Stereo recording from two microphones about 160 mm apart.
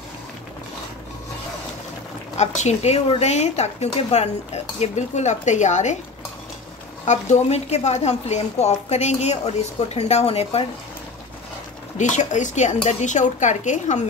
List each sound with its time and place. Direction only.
2.3 s a woman's voice: 45° left (ahead or behind)
7.1 s a woman's voice: 45° left (ahead or behind)
12.0 s a woman's voice: 50° left (ahead or behind)